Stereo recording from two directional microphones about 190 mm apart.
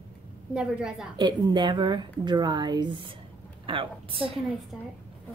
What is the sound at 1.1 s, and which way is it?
A woman's voice, 25° right (ahead or behind).